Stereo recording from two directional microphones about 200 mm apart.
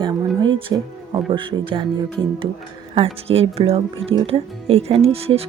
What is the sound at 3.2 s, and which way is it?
Speech, 30° right (ahead or behind).